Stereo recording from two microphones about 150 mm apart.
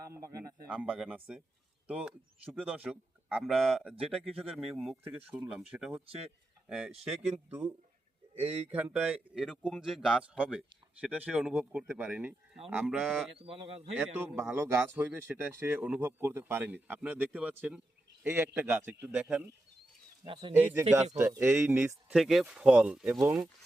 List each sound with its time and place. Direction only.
0.1 s a sound: 20° right (ahead or behind)
0.7 s speech: 10° right (ahead or behind)
8.7 s speech: 10° right (ahead or behind)
13.1 s speech: 5° left (ahead or behind)
13.3 s speech: 40° right (ahead or behind)
14.5 s speech: 15° right (ahead or behind)
20.2 s speech: 35° right (ahead or behind)
20.5 s speech: 15° right (ahead or behind)
22.1 s speech: centre (ahead or behind)